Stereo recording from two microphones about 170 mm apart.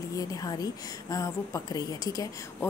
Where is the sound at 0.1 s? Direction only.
20° left (ahead or behind).